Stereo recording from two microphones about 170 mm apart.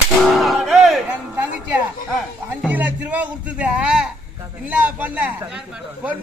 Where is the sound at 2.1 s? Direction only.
5° right (ahead or behind).